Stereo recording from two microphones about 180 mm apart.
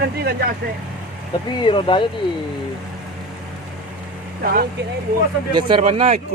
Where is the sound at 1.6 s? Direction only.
30° left (ahead or behind).